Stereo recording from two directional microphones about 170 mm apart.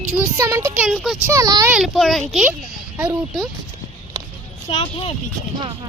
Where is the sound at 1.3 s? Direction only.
20° right (ahead or behind).